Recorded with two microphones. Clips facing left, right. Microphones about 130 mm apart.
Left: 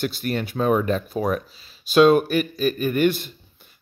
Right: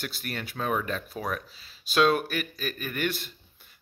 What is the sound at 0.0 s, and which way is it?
Speech, 25° left (ahead or behind).